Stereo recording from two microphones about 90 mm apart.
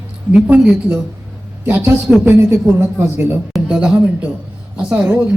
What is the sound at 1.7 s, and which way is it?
A man's voice, 25° right (ahead or behind).